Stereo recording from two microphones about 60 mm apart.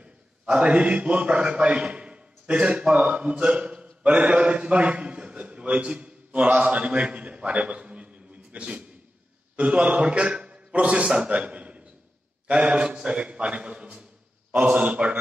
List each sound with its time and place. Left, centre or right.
0.0 s a man's voice: centre